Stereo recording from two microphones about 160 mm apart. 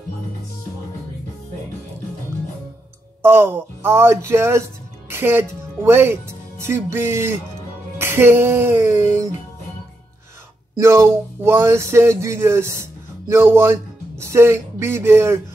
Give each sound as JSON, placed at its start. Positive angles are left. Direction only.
{"t": 3.2, "sound": "speech", "side_deg": -15}
{"t": 10.8, "sound": "speech", "side_deg": -15}